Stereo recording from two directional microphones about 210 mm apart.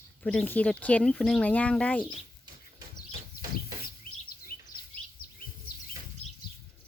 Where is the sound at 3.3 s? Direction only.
45° left (ahead or behind).